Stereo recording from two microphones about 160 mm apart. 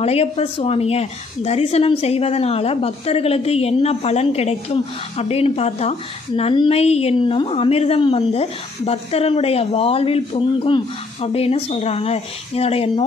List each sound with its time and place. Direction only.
0.0 s a woman's voice: 40° left (ahead or behind)